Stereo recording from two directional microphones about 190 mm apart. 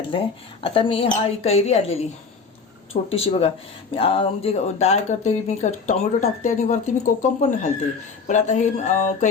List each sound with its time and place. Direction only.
0.1 s a woman's voice: 25° left (ahead or behind)